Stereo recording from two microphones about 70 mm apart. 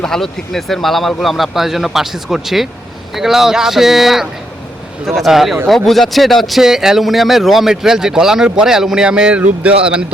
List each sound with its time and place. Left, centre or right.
0.0 s speech: centre